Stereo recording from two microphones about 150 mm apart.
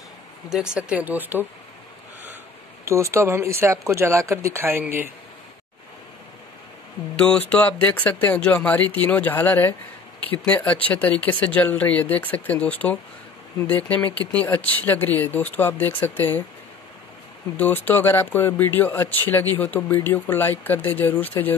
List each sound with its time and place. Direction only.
0.7 s speech: 10° right (ahead or behind)
2.9 s speech: 20° right (ahead or behind)
7.2 s speech: 10° left (ahead or behind)
17.6 s speech: 10° left (ahead or behind)